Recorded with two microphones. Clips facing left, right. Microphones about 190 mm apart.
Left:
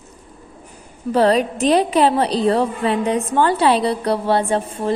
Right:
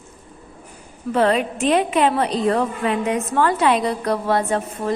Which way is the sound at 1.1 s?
35° left (ahead or behind).